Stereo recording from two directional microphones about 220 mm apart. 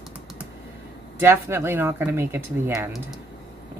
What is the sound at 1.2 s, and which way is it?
A woman's voice, 10° right (ahead or behind).